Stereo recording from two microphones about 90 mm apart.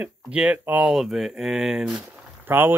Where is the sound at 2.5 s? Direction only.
25° right (ahead or behind).